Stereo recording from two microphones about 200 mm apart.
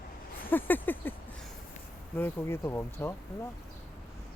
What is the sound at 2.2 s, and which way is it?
Speech, 10° left (ahead or behind).